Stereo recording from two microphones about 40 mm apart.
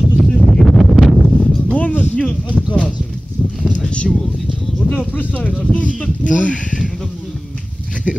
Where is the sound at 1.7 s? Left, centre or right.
Left.